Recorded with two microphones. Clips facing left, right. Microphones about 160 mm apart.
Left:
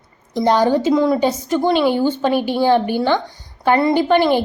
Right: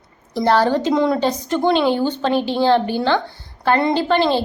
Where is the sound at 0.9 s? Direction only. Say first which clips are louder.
Left 2 dB; centre (ahead or behind).